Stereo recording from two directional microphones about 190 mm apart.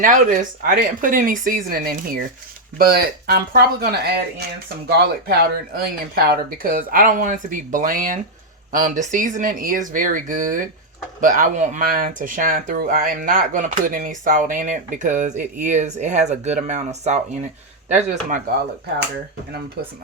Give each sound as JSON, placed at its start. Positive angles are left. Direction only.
{"t": 0.0, "sound": "speech", "side_deg": -45}